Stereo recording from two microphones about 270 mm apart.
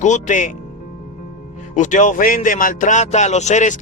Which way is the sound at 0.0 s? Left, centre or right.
Left.